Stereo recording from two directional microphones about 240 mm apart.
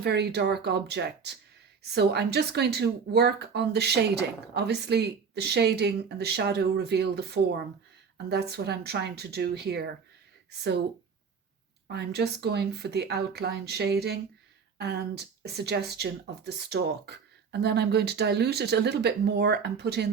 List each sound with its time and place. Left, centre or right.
0.0 s speech: right
11.9 s speech: right